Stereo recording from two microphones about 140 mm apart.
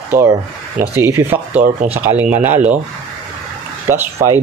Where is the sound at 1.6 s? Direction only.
60° right (ahead or behind).